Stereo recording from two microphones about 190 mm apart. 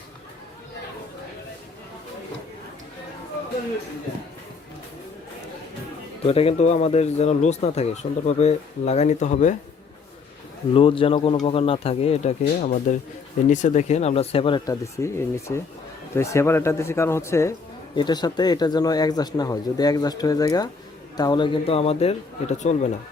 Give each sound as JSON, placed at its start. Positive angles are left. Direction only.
{"t": 6.2, "sound": "speech", "side_deg": 30}
{"t": 10.8, "sound": "speech", "side_deg": 30}